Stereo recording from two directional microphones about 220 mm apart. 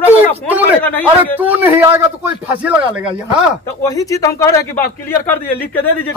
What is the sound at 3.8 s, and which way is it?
Speech, 15° left (ahead or behind).